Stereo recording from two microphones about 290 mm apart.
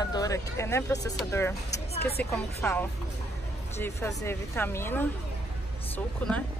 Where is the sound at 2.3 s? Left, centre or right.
Centre.